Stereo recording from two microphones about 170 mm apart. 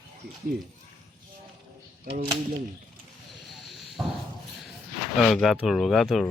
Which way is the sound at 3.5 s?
Centre (ahead or behind).